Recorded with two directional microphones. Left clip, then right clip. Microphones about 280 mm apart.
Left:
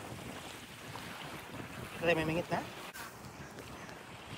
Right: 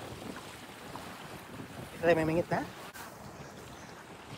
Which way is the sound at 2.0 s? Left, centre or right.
Right.